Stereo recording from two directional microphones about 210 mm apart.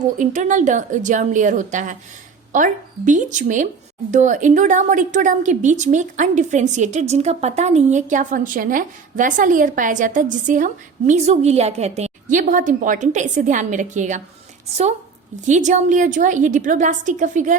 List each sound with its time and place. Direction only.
0.2 s a woman's voice: 35° right (ahead or behind)
15.4 s a woman's voice: 35° right (ahead or behind)